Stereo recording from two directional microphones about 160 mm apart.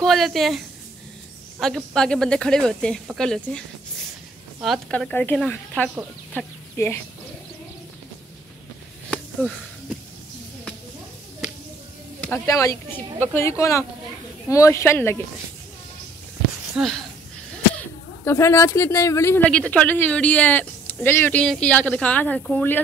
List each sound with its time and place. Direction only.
0.0 s speech: centre (ahead or behind)
1.6 s speech: centre (ahead or behind)
4.6 s speech: centre (ahead or behind); by 7.0 s 15° left (ahead or behind)
12.4 s a woman's voice: 20° left (ahead or behind)
16.7 s speech: centre (ahead or behind)
17.7 s speech: 15° left (ahead or behind)